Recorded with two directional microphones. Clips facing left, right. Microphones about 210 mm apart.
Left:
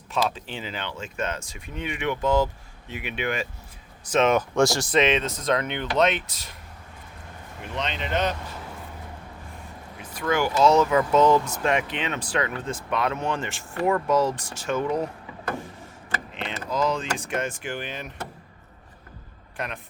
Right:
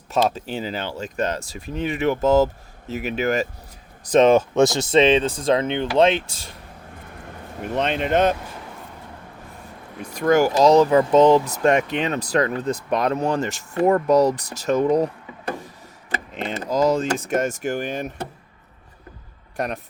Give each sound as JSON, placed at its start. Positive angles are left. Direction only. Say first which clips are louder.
{"t": 0.1, "sound": "speech", "louder": "right 6 dB", "side_deg": -40}
{"t": 7.6, "sound": "speech", "louder": "right 8 dB", "side_deg": -50}
{"t": 10.2, "sound": "speech", "louder": "right 6 dB", "side_deg": -40}
{"t": 16.3, "sound": "speech", "louder": "right 6 dB", "side_deg": -40}
{"t": 19.5, "sound": "speech", "louder": "right 7 dB", "side_deg": -40}